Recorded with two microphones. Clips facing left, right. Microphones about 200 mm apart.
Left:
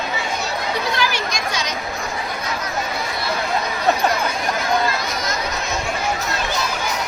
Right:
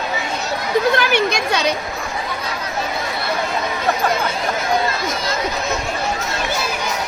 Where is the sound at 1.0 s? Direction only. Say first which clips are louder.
Right 5 dB; 60° right (ahead or behind).